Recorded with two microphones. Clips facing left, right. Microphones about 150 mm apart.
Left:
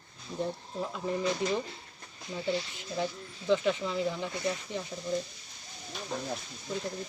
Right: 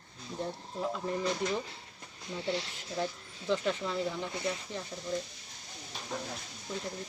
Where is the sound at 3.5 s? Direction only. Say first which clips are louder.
Left 4 dB; centre (ahead or behind).